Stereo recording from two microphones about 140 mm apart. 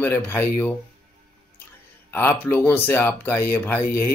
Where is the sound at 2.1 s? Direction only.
15° left (ahead or behind).